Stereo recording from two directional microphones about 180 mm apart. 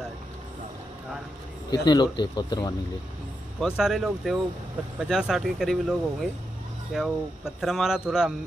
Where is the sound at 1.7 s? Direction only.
25° left (ahead or behind).